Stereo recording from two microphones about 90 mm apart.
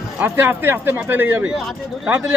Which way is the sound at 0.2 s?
25° right (ahead or behind).